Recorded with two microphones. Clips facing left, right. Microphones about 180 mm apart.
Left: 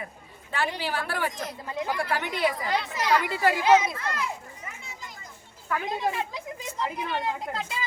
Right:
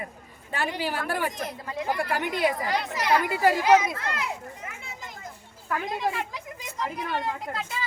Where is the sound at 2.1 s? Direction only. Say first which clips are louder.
Right 2 dB; 45° right (ahead or behind).